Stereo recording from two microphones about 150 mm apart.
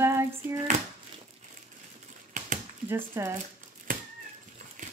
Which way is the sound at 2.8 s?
15° right (ahead or behind).